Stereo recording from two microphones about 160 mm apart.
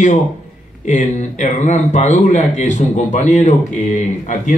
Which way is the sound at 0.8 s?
50° left (ahead or behind).